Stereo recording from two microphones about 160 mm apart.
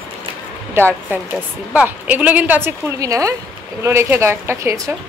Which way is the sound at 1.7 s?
10° right (ahead or behind).